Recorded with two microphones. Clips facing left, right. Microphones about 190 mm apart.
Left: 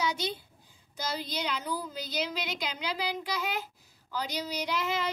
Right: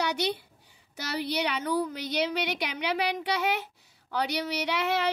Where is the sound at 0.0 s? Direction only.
70° right (ahead or behind).